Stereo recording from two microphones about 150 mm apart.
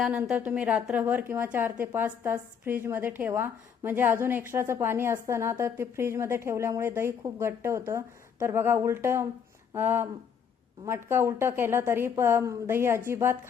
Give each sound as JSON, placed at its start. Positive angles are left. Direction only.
{"t": 0.0, "sound": "a woman's voice", "side_deg": -5}